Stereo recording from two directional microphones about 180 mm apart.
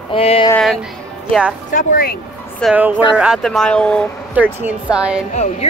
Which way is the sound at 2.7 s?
5° right (ahead or behind).